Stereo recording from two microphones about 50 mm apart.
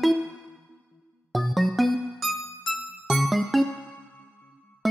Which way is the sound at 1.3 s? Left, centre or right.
Centre.